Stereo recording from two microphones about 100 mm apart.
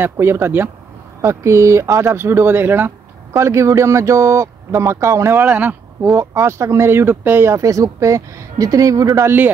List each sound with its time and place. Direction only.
0.0 s speech: 25° right (ahead or behind)
5.4 s speech: 15° right (ahead or behind)
6.1 s speech: 25° right (ahead or behind)